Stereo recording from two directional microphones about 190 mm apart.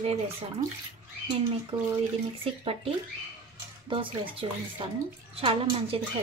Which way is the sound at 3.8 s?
25° right (ahead or behind).